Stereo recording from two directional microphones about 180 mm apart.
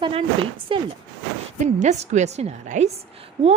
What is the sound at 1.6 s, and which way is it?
A woman's voice, 40° right (ahead or behind).